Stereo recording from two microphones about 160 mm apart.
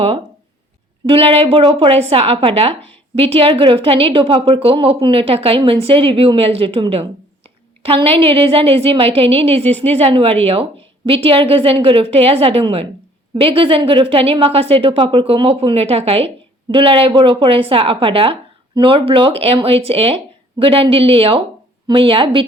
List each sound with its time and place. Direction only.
1.0 s a woman's voice: 35° right (ahead or behind)